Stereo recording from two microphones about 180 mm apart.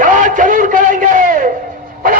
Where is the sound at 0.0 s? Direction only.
45° right (ahead or behind).